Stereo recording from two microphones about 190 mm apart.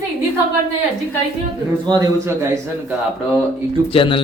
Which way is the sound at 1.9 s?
20° right (ahead or behind).